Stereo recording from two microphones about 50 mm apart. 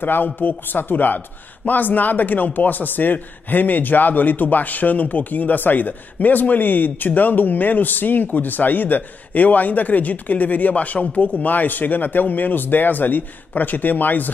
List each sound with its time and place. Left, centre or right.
0.0 s a man's voice: left